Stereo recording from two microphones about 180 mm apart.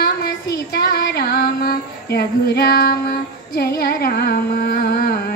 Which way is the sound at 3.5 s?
60° left (ahead or behind).